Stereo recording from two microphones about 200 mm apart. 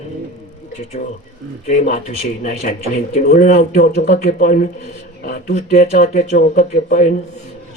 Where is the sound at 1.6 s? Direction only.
35° left (ahead or behind).